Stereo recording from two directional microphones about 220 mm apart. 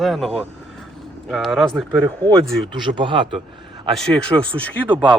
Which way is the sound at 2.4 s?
20° right (ahead or behind).